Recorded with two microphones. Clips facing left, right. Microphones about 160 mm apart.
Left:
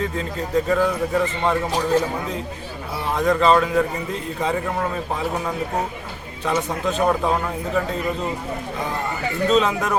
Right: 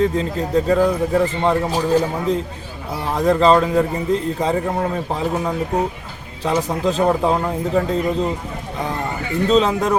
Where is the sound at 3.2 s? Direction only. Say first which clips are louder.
Right 3 dB; 30° right (ahead or behind).